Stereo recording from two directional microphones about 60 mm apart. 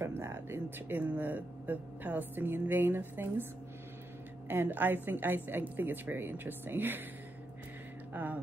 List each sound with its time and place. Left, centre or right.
0.0 s speech: right
4.5 s speech: right
8.1 s music: right